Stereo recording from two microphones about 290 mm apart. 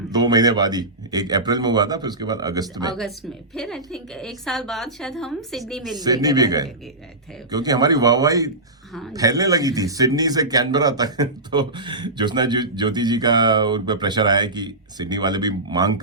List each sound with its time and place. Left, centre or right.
0.1 s speech: centre
3.5 s a woman's voice: centre
6.0 s speech: centre